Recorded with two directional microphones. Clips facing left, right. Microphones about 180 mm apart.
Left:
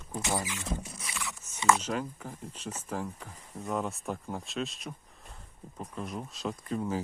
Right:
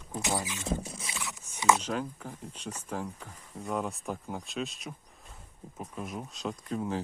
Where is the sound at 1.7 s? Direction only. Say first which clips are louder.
Even; centre (ahead or behind).